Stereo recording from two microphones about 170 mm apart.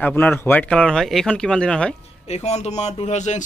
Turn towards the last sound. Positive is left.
turn(degrees=45)  # may be behind; listen again after turning